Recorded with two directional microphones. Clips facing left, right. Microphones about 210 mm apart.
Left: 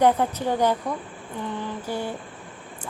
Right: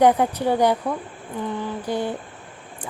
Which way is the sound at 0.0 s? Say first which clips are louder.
Right 3 dB; 15° right (ahead or behind).